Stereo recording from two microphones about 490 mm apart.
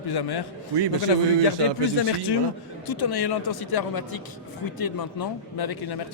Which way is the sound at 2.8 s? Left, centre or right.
Left.